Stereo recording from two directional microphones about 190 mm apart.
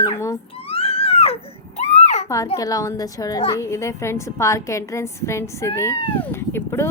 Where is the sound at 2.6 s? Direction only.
20° left (ahead or behind).